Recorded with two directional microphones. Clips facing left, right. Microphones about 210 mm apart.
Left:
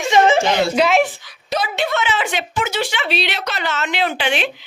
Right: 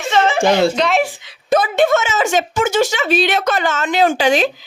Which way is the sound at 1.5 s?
50° right (ahead or behind).